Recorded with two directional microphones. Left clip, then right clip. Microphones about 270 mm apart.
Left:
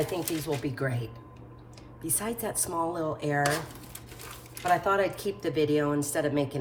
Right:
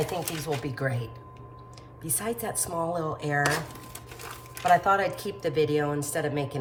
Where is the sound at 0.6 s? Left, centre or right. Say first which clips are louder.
Right 1 dB; centre.